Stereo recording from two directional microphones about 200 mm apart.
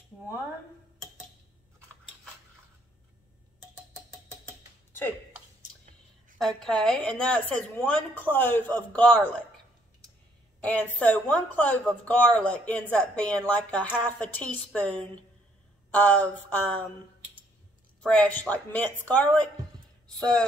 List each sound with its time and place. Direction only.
6.3 s a woman's voice: centre (ahead or behind)
10.6 s speech: 5° left (ahead or behind)
18.0 s speech: 5° left (ahead or behind)